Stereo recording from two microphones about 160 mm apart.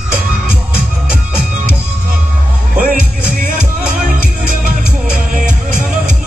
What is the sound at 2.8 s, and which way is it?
Music, 60° right (ahead or behind).